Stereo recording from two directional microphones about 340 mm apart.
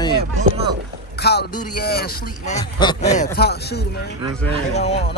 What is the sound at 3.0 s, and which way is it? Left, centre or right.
Speech, left.